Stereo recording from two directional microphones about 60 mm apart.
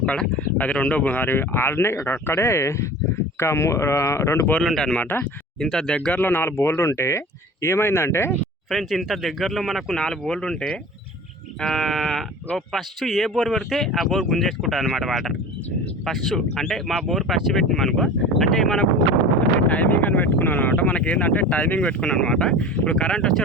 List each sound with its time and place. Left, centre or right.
0.0 s speech: centre; by 4.4 s left
4.6 s speech: centre
4.9 s speech: left
5.5 s speech: centre
6.1 s speech: left
8.7 s speech: centre
19.6 s speech: left